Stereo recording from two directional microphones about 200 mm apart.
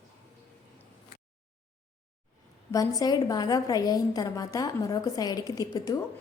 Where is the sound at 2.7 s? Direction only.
15° left (ahead or behind).